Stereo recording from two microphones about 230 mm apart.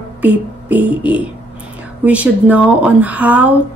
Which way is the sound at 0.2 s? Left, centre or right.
Centre.